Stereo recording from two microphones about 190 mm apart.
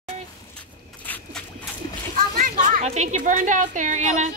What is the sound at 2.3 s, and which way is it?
A woman's voice, 45° right (ahead or behind).